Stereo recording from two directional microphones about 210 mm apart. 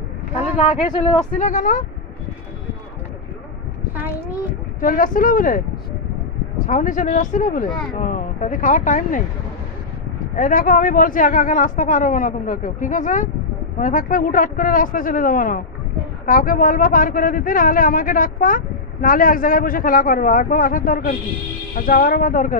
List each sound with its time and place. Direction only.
0.4 s speech: 25° left (ahead or behind)
1.3 s speech: 40° left (ahead or behind)
4.7 s speech: 40° left (ahead or behind)
6.6 s speech: 40° left (ahead or behind)
10.3 s speech: 40° left (ahead or behind)